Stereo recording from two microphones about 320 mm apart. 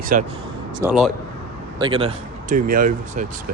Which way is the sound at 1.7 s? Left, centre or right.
Centre.